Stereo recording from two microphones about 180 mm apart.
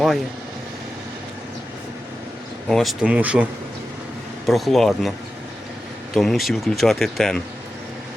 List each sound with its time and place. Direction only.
2.6 s speech: centre (ahead or behind)
4.4 s speech: centre (ahead or behind)
6.1 s speech: centre (ahead or behind)